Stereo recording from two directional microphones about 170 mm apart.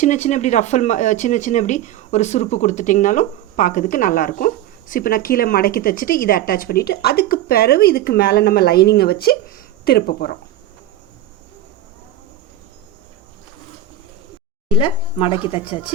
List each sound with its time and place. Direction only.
0.0 s speech: 45° left (ahead or behind); by 10.3 s 65° left (ahead or behind)
14.7 s speech: 30° left (ahead or behind)